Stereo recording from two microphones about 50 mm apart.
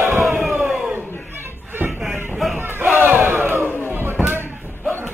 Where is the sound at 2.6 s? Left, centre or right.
Right.